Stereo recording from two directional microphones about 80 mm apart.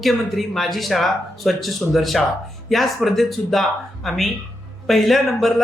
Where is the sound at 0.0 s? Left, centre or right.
Centre.